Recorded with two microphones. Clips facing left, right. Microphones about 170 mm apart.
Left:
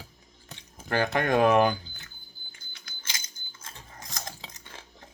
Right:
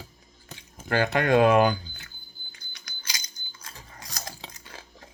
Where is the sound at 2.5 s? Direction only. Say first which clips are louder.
Right 1 dB; 25° left (ahead or behind).